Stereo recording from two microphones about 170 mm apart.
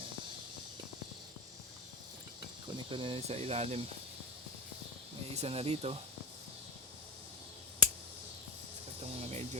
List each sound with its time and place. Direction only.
2.7 s speech: 30° right (ahead or behind)
5.3 s speech: 40° right (ahead or behind)
9.1 s a sound: 40° right (ahead or behind)